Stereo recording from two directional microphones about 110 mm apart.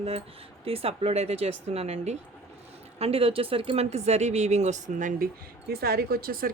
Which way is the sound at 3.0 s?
65° right (ahead or behind).